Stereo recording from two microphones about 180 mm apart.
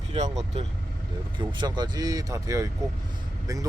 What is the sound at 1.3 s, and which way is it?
Speech, 25° right (ahead or behind).